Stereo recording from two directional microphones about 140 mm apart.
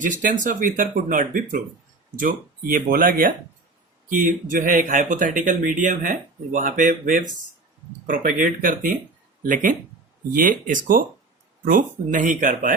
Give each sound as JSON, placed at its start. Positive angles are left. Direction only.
{"t": 0.0, "sound": "speech", "side_deg": -65}
{"t": 4.1, "sound": "speech", "side_deg": -75}